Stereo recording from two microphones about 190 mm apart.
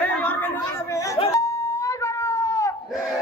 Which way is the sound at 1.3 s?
15° left (ahead or behind).